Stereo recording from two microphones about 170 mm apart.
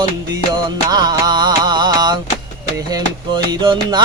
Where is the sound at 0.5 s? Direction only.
25° right (ahead or behind).